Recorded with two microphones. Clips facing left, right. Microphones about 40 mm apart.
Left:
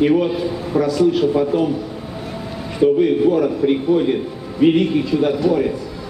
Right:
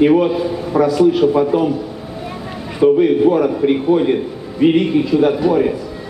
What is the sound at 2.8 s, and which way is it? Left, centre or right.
Speech, centre.